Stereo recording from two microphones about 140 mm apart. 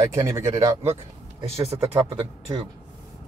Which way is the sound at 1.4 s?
45° right (ahead or behind).